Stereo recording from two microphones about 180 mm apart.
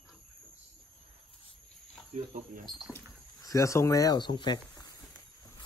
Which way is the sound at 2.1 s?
45° right (ahead or behind).